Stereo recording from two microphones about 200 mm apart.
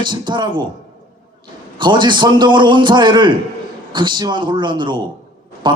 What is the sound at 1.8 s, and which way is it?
A man's voice, 25° right (ahead or behind).